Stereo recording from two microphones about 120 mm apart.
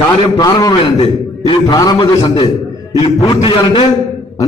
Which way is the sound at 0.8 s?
50° left (ahead or behind).